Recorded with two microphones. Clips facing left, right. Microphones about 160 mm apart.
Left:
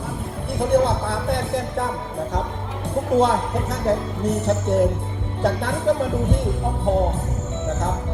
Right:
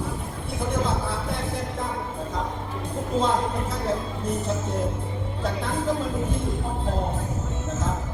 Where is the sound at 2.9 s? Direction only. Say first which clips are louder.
Left 6 dB; 75° left (ahead or behind).